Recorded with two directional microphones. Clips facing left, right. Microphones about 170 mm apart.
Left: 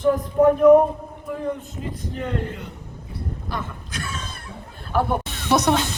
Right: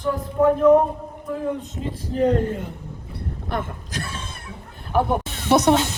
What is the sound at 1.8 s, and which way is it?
Speech, 30° right (ahead or behind).